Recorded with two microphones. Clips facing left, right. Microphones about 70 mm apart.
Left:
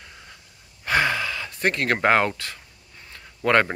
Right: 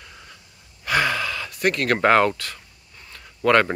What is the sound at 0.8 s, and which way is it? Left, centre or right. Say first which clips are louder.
Gasp: even; left.